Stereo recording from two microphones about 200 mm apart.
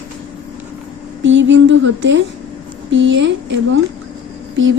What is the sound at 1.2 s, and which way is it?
Speech, 65° right (ahead or behind).